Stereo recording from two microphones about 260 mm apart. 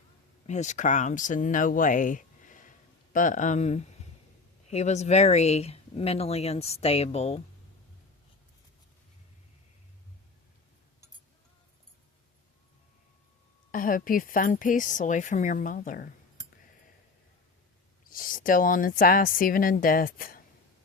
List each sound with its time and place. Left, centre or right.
0.4 s speech: left
13.7 s speech: left
18.1 s speech: left